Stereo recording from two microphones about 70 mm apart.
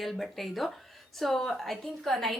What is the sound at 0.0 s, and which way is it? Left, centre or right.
A woman's voice, centre.